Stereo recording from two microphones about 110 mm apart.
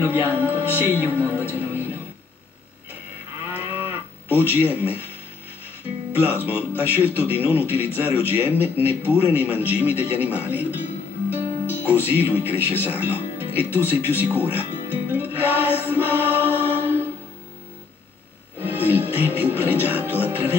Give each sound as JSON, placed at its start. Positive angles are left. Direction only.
{"t": 0.0, "sound": "music", "side_deg": -20}
{"t": 3.5, "sound": "livestock", "side_deg": -20}
{"t": 6.1, "sound": "a man's voice", "side_deg": -15}
{"t": 14.0, "sound": "music", "side_deg": -15}
{"t": 18.6, "sound": "television", "side_deg": -15}
{"t": 20.1, "sound": "music", "side_deg": -15}